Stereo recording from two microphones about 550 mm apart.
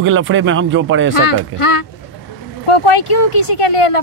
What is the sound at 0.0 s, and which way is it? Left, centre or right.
Speech, right.